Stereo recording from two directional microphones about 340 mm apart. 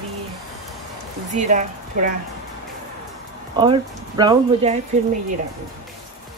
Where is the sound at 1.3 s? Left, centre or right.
Right.